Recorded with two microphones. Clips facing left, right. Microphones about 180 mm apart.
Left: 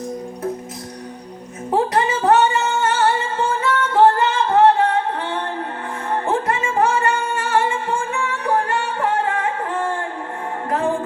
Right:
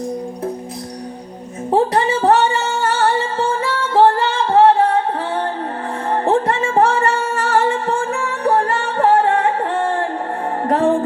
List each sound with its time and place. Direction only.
1.7 s music: 30° right (ahead or behind)
6.1 s music: 35° right (ahead or behind)